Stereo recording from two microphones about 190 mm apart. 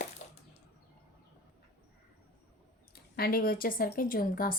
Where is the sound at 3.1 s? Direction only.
55° left (ahead or behind).